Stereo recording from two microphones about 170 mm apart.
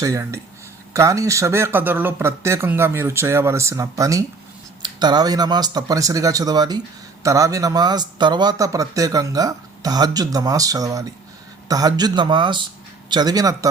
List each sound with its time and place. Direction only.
0.0 s speech: 15° right (ahead or behind)